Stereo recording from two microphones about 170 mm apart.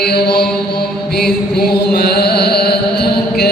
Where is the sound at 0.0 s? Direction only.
70° left (ahead or behind).